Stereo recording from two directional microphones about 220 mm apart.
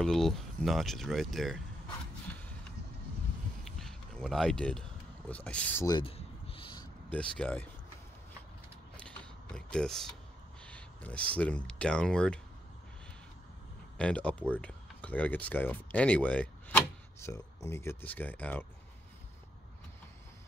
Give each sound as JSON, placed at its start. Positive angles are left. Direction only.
{"t": 0.0, "sound": "speech", "side_deg": 0}
{"t": 3.6, "sound": "a sound", "side_deg": 0}
{"t": 7.1, "sound": "speech", "side_deg": 5}
{"t": 8.9, "sound": "typing", "side_deg": 5}
{"t": 10.6, "sound": "speech", "side_deg": 5}
{"t": 13.9, "sound": "speech", "side_deg": 5}